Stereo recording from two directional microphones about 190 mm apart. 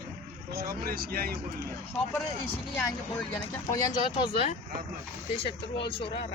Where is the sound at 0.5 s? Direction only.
55° right (ahead or behind).